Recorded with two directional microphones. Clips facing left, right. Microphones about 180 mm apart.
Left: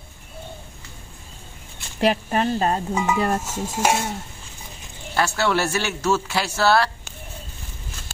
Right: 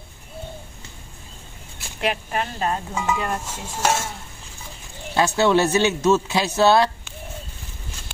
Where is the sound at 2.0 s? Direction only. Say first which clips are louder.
Left 4 dB; 35° left (ahead or behind).